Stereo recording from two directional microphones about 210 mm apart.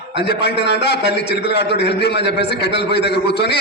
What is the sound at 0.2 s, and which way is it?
A man's voice, 50° left (ahead or behind).